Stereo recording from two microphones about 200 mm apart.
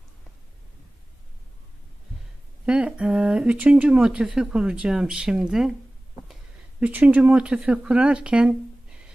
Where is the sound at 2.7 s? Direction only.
5° right (ahead or behind).